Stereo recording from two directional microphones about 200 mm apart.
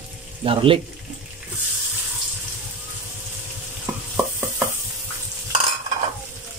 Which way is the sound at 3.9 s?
5° right (ahead or behind).